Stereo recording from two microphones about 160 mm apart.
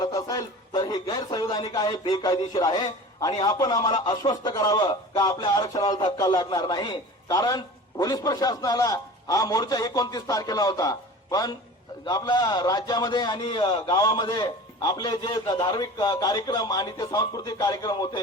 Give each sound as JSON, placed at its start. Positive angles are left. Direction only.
{"t": 0.0, "sound": "a man's voice", "side_deg": 20}